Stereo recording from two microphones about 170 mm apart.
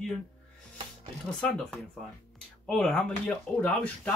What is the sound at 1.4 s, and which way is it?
Speech, 5° left (ahead or behind).